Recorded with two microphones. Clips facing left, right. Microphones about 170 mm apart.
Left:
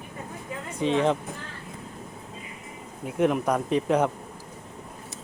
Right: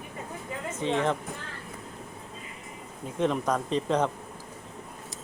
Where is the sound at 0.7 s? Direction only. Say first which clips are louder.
Left 4 dB; 15° left (ahead or behind).